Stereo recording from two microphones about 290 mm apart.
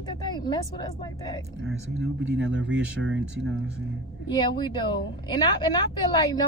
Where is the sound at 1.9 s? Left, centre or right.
Right.